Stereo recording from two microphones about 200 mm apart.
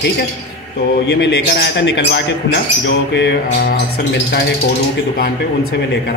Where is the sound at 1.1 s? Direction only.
60° left (ahead or behind).